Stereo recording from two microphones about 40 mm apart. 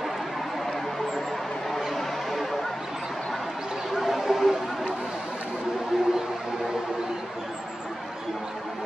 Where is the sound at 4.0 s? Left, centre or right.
Centre.